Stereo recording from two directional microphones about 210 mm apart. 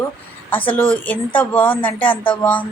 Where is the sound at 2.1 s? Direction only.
25° left (ahead or behind).